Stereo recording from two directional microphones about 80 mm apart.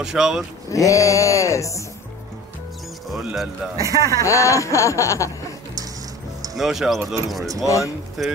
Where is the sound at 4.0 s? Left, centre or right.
Left.